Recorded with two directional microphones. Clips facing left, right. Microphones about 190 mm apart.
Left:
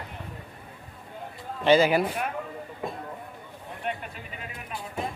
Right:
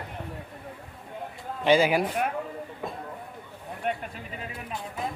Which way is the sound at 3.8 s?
50° right (ahead or behind).